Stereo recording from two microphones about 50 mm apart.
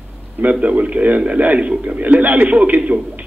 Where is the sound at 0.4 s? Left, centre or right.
Right.